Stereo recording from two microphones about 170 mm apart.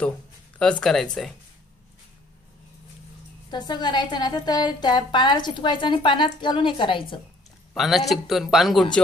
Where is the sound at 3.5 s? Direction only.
25° left (ahead or behind).